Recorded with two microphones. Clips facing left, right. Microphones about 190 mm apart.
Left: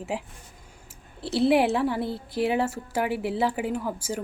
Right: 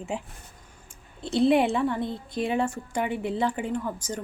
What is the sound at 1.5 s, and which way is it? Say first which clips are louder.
A woman's voice: left 1 dB; 5° left (ahead or behind).